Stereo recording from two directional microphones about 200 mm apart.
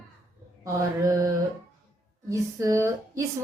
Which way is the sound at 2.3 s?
15° right (ahead or behind).